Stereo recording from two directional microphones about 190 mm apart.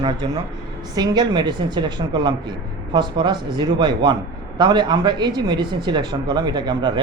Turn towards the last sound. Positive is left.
turn(degrees=-25)  # may be behind; listen again after turning